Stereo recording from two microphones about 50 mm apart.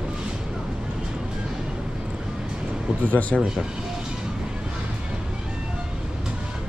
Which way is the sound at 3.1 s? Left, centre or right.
Left.